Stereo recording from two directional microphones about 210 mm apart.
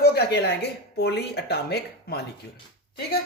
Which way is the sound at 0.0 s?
50° left (ahead or behind).